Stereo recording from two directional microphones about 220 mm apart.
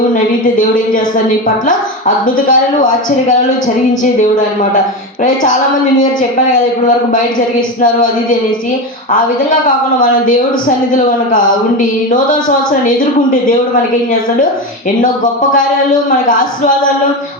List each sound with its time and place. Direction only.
1.6 s speech: 35° left (ahead or behind)
15.0 s speech: 35° left (ahead or behind)